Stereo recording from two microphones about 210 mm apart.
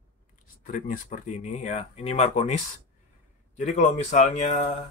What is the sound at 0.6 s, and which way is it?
Speech, 40° left (ahead or behind).